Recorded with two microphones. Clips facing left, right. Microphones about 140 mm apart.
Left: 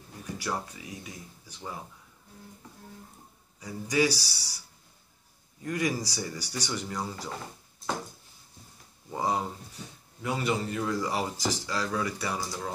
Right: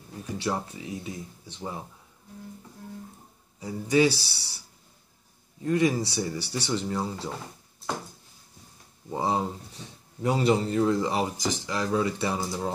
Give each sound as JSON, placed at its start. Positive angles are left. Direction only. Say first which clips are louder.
{"t": 0.4, "sound": "speech", "louder": "right 4 dB", "side_deg": -25}
{"t": 3.5, "sound": "speech", "louder": "right 5 dB", "side_deg": -25}
{"t": 5.6, "sound": "speech", "louder": "right 6 dB", "side_deg": -25}
{"t": 9.1, "sound": "speech", "louder": "right 2 dB", "side_deg": -25}